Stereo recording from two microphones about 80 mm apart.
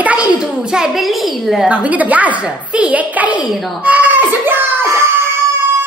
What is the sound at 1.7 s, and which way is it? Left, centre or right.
A child's voice, centre.